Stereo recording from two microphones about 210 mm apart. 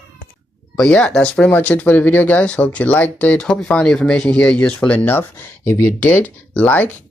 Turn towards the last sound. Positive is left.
turn(degrees=10)  # may be behind; listen again after turning